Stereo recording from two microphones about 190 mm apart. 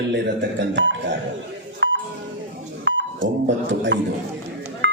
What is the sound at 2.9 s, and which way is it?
Speech, 70° right (ahead or behind).